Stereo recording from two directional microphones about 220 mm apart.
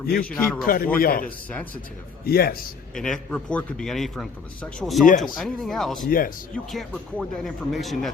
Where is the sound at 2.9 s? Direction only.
5° left (ahead or behind).